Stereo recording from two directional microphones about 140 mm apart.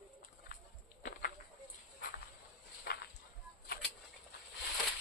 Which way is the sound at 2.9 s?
90° left.